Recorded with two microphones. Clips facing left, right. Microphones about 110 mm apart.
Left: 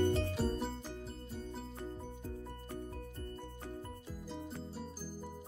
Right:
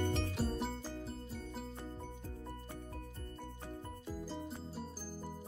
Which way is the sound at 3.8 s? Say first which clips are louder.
Right 2 dB; centre (ahead or behind).